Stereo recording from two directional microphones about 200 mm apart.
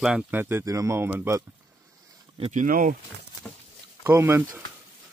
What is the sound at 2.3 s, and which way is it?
Speech, 35° right (ahead or behind).